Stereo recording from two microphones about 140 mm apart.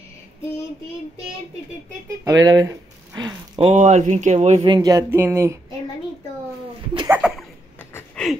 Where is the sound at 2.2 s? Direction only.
25° right (ahead or behind).